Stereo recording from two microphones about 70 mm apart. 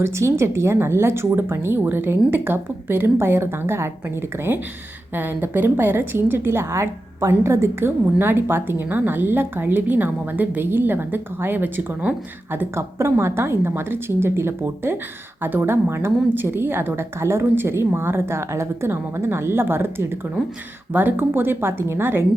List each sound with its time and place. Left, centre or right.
0.0 s a woman's voice: right
12.7 s a woman's voice: right